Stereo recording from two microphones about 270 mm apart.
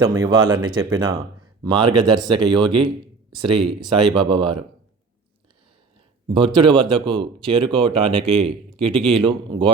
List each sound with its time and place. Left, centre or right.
0.0 s speech: centre
6.2 s speech: centre